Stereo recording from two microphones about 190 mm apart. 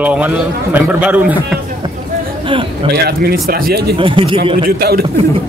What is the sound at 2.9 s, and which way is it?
Speech, 50° right (ahead or behind).